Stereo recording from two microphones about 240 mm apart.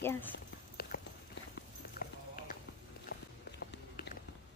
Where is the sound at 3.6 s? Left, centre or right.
Left.